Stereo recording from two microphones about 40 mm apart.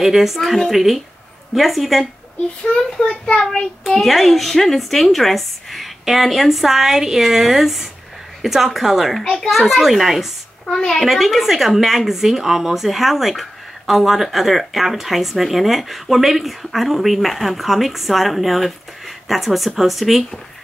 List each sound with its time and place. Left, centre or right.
0.0 s a woman's voice: centre
2.6 s a child's voice: left
4.0 s a woman's voice: centre
9.2 s a child's voice: centre
9.5 s a woman's voice: centre